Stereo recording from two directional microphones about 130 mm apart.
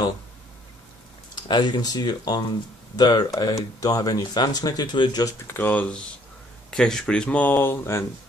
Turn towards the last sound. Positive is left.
turn(degrees=20)  # may be behind; listen again after turning